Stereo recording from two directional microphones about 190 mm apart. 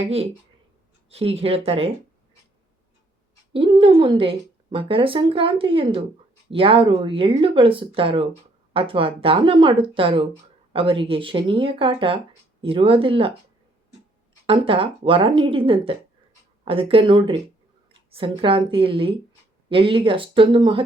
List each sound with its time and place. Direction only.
1.1 s speech: 30° right (ahead or behind)
3.5 s a woman's voice: 25° right (ahead or behind)
14.4 s a woman's voice: 30° right (ahead or behind)